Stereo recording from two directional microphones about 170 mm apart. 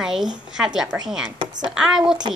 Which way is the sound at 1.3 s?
30° right (ahead or behind).